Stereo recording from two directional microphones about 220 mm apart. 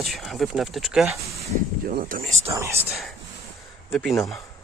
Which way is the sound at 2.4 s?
15° right (ahead or behind).